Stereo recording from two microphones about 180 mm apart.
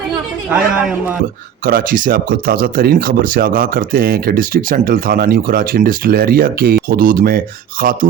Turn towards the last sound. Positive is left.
turn(degrees=-50)  # may be behind; listen again after turning